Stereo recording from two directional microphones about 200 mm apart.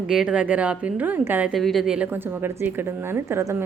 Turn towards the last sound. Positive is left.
turn(degrees=-15)  # may be behind; listen again after turning